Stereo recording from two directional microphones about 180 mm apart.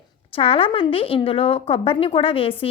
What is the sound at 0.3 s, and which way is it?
A woman's voice, 30° left (ahead or behind).